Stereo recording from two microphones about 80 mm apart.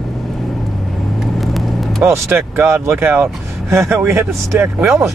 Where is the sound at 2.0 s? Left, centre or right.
Right.